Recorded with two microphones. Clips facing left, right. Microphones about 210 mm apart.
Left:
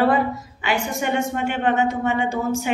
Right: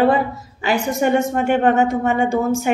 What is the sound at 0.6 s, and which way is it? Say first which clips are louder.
Speech: right 6 dB; 40° right (ahead or behind).